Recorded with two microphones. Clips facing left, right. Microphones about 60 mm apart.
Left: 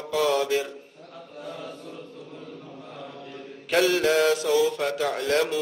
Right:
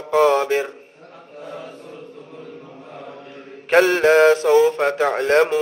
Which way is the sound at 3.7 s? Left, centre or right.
Right.